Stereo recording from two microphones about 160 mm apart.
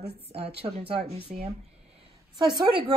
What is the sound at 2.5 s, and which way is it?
Speech, 25° right (ahead or behind).